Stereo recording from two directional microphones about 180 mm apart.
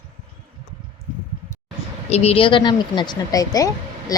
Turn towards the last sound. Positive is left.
turn(degrees=20)  # may be behind; listen again after turning